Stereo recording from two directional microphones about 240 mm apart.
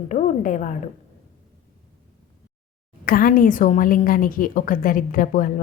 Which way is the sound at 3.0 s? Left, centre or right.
Left.